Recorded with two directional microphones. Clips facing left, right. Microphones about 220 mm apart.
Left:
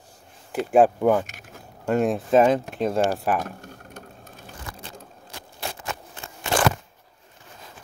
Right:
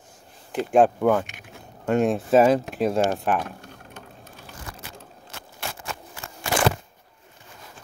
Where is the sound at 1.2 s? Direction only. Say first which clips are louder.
Even; 40° left (ahead or behind).